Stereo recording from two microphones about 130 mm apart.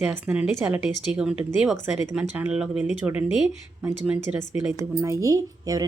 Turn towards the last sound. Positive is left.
turn(degrees=-25)  # may be behind; listen again after turning